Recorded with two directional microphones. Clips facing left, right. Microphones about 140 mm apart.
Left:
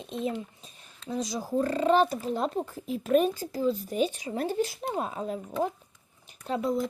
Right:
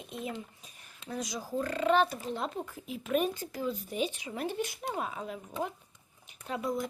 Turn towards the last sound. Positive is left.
turn(degrees=25)  # may be behind; listen again after turning